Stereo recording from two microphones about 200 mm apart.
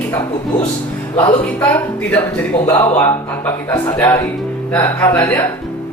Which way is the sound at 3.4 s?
15° left (ahead or behind).